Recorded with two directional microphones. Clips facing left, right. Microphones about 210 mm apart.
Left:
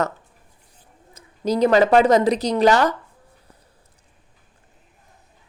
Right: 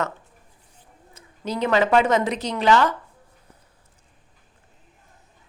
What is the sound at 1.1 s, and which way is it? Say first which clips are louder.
Speech: left 7 dB; 40° left (ahead or behind).